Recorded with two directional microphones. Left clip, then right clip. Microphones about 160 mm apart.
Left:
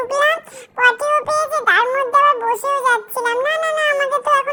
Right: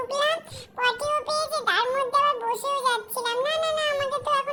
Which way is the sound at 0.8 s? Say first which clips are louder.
Left 10 dB; 10° left (ahead or behind).